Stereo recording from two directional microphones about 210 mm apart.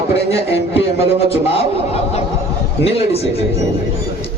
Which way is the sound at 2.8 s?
30° left (ahead or behind).